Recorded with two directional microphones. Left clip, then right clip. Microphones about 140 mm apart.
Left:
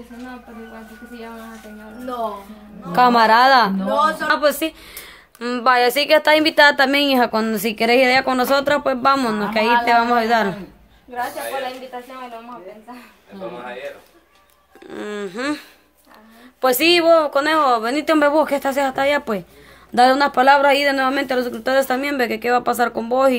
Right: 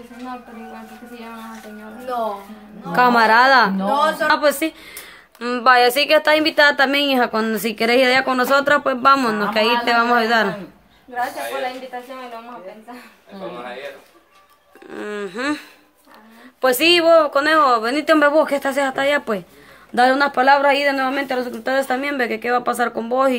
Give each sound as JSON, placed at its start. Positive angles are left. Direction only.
{"t": 2.9, "sound": "a woman's voice", "side_deg": 10}
{"t": 4.3, "sound": "a woman's voice", "side_deg": 0}
{"t": 5.0, "sound": "a woman's voice", "side_deg": 10}
{"t": 13.3, "sound": "speech", "side_deg": -75}
{"t": 14.9, "sound": "a woman's voice", "side_deg": 15}
{"t": 16.6, "sound": "a woman's voice", "side_deg": 15}